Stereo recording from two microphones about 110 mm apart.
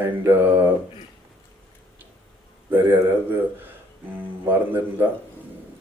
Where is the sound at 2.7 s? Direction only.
20° right (ahead or behind).